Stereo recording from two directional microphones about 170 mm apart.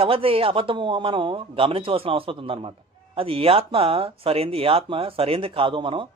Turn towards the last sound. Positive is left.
turn(degrees=-30)  # may be behind; listen again after turning